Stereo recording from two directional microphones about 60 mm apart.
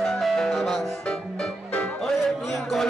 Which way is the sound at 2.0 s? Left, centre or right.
Centre.